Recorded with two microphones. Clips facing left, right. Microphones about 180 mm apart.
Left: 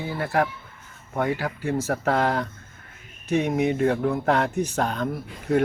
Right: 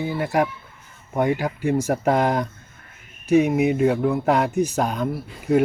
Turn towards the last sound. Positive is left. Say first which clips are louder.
# right 3 dB
turn(degrees=-10)  # may be behind; listen again after turning